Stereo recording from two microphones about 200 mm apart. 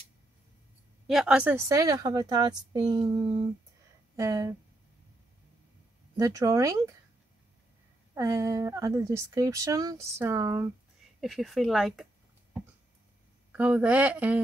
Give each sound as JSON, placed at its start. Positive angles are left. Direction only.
{"t": 1.0, "sound": "a woman's voice", "side_deg": -5}
{"t": 6.1, "sound": "speech", "side_deg": -15}
{"t": 8.1, "sound": "speech", "side_deg": -15}
{"t": 11.1, "sound": "speech", "side_deg": 0}
{"t": 13.5, "sound": "speech", "side_deg": -5}